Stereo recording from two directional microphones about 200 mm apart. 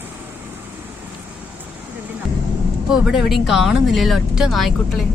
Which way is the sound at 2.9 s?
Centre (ahead or behind).